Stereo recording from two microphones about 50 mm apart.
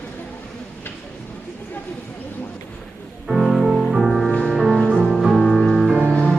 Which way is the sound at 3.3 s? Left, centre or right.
Centre.